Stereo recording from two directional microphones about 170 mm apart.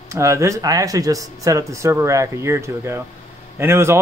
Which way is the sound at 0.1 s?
15° right (ahead or behind).